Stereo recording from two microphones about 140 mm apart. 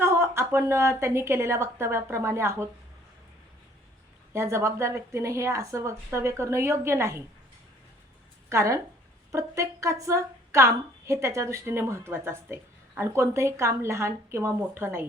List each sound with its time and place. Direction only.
0.0 s a woman's voice: 20° right (ahead or behind)
4.3 s a woman's voice: 20° right (ahead or behind)
8.4 s a woman's voice: 20° right (ahead or behind)